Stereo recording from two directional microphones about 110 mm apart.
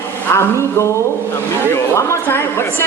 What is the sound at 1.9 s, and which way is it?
Speech, 25° left (ahead or behind).